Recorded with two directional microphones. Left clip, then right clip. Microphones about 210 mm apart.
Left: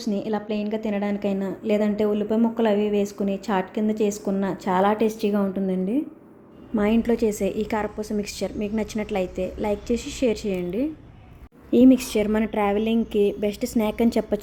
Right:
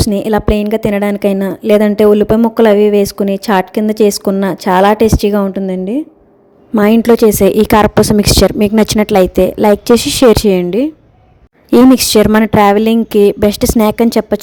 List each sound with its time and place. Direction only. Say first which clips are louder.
0.0 s a woman's voice: right 14 dB; 50° right (ahead or behind)